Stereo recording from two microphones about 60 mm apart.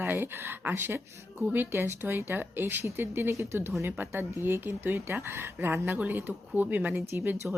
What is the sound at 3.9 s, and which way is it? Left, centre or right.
Speech, right.